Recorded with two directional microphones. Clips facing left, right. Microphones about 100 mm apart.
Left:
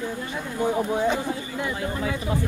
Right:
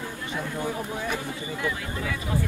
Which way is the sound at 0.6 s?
25° left (ahead or behind).